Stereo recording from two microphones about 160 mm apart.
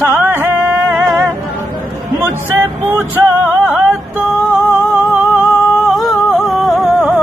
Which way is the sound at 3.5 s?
10° right (ahead or behind).